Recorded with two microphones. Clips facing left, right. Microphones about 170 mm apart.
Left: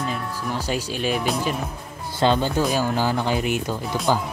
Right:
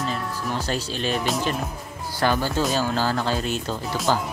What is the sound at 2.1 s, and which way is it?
Speech, 25° left (ahead or behind).